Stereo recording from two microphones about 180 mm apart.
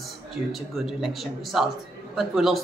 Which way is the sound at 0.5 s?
Centre (ahead or behind).